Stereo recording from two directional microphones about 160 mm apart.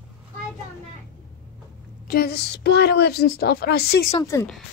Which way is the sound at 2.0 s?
75° left (ahead or behind).